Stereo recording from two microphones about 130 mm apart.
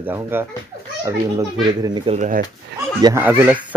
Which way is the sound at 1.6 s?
35° right (ahead or behind).